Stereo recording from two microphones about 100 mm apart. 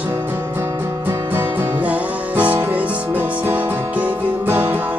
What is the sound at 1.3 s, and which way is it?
Music, 20° right (ahead or behind).